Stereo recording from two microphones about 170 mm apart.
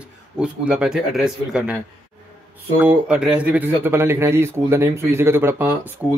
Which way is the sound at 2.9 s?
5° right (ahead or behind).